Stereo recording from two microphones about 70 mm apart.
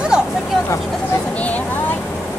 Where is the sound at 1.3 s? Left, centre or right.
Left.